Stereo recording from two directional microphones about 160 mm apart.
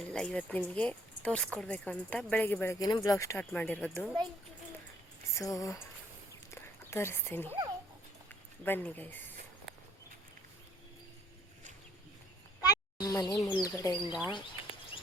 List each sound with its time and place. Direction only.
0.1 s speech: 5° left (ahead or behind)
3.5 s speech: 10° left (ahead or behind)
5.4 s speech: 20° left (ahead or behind)
6.5 s a sound: 15° left (ahead or behind)
8.3 s speech: 10° left (ahead or behind)
12.6 s a sound: 25° left (ahead or behind)
13.6 s speech: 20° left (ahead or behind)
13.9 s speech: 5° right (ahead or behind)